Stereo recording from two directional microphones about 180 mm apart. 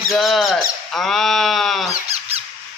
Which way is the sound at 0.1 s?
Centre (ahead or behind).